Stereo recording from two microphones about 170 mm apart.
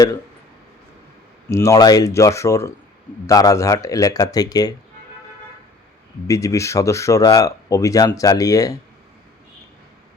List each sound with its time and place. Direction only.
1.5 s speech: 15° left (ahead or behind)
6.2 s speech: 20° left (ahead or behind)